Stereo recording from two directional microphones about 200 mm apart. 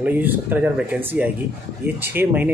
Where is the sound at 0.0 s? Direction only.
10° right (ahead or behind).